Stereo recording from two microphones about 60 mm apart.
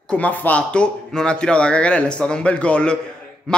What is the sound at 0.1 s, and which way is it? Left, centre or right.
A man's voice, left.